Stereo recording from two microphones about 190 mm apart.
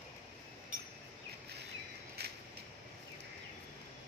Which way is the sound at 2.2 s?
60° right (ahead or behind).